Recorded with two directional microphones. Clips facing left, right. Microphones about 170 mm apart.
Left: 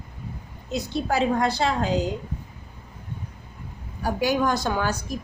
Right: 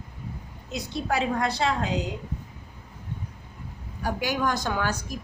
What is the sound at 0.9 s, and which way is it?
A woman's voice, 30° left (ahead or behind).